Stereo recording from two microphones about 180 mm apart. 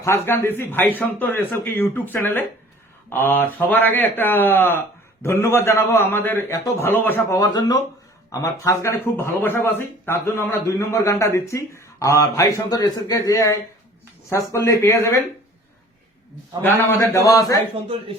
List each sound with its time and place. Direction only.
0.0 s a man's voice: 15° left (ahead or behind)
16.6 s a man's voice: 10° left (ahead or behind)